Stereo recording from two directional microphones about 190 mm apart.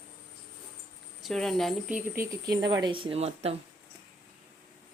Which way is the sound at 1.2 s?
Centre (ahead or behind).